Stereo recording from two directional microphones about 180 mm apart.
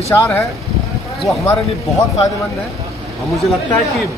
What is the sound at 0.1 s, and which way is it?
Speech, 15° left (ahead or behind).